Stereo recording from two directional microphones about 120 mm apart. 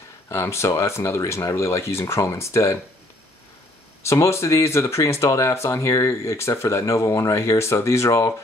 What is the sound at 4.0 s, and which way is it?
Speech, 25° left (ahead or behind).